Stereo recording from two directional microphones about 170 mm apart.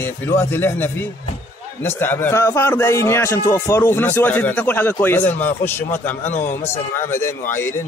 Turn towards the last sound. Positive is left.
turn(degrees=15)  # may be behind; listen again after turning